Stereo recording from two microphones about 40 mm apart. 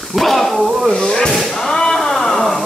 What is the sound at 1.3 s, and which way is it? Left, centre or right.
Whip, centre.